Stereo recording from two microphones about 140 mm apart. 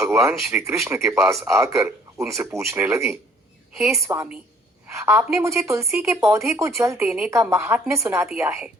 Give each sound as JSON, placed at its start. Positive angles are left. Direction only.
{"t": 0.0, "sound": "a woman's voice", "side_deg": -15}